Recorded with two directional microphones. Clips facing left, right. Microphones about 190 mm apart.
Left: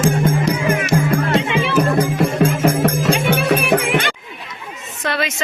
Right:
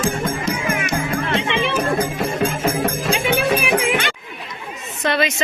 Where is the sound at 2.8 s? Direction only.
75° left (ahead or behind); by 4.1 s 55° left (ahead or behind).